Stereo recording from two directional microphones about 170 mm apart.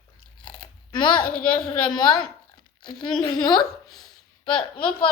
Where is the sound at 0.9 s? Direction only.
25° left (ahead or behind).